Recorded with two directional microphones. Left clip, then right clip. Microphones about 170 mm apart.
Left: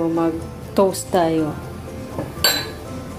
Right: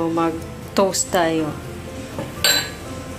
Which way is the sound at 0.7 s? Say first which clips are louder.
Left 1 dB; 25° left (ahead or behind).